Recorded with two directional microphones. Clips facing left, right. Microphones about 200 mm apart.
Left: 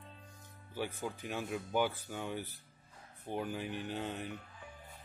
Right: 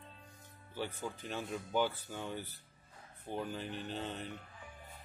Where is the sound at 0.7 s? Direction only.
10° left (ahead or behind).